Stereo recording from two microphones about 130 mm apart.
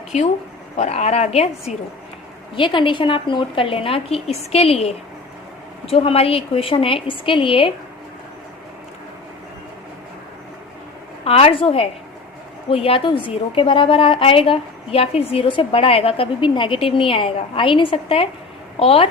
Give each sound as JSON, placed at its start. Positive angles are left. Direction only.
{"t": 0.8, "sound": "speech", "side_deg": 60}
{"t": 2.6, "sound": "a woman's voice", "side_deg": 40}
{"t": 11.3, "sound": "a woman's voice", "side_deg": 45}